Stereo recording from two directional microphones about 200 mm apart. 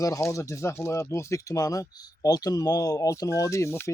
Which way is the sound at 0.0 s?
15° left (ahead or behind).